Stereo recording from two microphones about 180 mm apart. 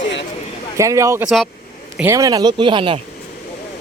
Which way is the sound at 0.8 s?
15° right (ahead or behind).